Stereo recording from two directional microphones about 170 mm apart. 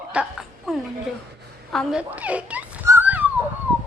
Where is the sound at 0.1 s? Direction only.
5° right (ahead or behind).